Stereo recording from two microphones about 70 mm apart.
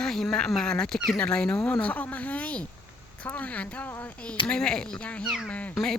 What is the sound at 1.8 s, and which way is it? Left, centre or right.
Speech, left.